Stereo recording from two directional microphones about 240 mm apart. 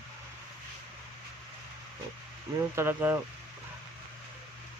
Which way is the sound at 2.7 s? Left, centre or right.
Centre.